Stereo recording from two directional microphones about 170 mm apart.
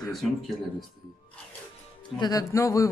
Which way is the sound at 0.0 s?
Centre (ahead or behind).